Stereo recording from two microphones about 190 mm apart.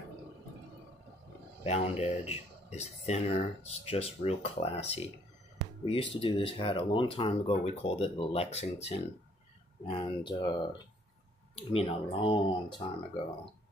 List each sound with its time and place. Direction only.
1.6 s speech: 35° left (ahead or behind)